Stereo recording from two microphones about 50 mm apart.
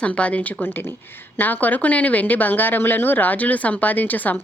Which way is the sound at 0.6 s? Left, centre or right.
Left.